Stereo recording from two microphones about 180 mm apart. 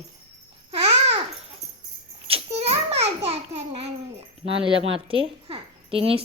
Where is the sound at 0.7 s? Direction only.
30° right (ahead or behind).